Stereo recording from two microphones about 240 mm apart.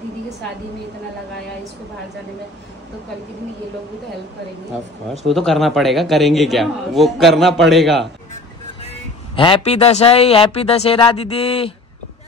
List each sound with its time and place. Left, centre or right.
5.3 s a man's voice: centre
9.3 s speech: left